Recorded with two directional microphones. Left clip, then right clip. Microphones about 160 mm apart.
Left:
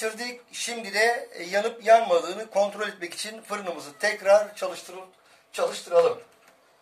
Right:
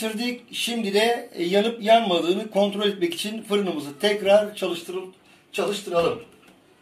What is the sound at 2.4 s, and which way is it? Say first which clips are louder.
Speech: right 2 dB; centre (ahead or behind).